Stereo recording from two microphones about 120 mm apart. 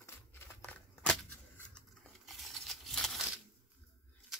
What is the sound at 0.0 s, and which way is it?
Scissors, 20° left (ahead or behind).